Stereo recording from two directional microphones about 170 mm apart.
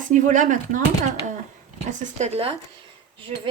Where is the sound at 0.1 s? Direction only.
50° right (ahead or behind).